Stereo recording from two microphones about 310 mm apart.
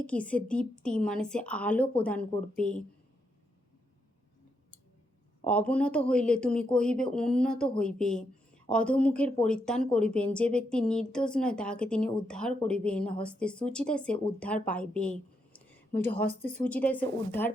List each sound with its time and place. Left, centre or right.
0.0 s speech: centre
5.5 s a woman's voice: centre